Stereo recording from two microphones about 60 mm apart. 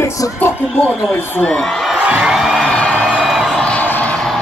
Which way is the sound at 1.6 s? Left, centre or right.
Centre.